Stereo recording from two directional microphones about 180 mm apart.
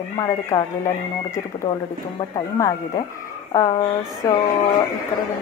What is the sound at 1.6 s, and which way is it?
A woman's voice, 25° left (ahead or behind).